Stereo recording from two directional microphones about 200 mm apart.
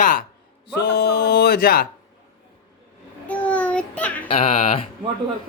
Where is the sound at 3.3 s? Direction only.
5° left (ahead or behind).